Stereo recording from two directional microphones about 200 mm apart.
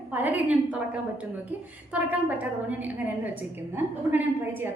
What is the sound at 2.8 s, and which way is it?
A woman's voice, 10° right (ahead or behind).